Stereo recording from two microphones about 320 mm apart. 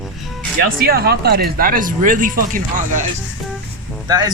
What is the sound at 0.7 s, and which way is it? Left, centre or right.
Speech, right.